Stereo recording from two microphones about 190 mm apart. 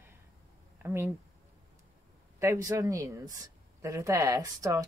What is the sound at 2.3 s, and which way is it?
A woman's voice, 15° right (ahead or behind).